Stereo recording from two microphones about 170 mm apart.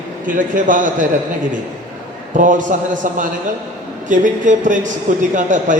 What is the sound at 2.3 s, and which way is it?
A man's voice, 50° right (ahead or behind).